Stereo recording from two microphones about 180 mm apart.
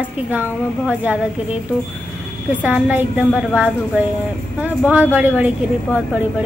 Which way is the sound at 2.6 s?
10° right (ahead or behind).